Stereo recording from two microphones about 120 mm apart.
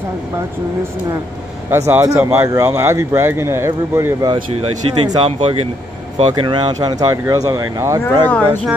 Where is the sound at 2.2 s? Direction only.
15° right (ahead or behind).